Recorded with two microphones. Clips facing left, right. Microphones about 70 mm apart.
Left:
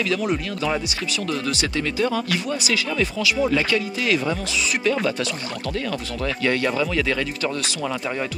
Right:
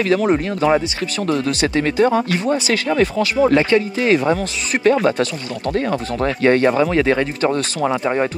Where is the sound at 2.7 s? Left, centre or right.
Right.